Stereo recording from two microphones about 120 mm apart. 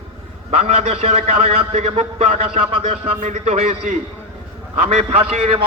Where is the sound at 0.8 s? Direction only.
60° right (ahead or behind).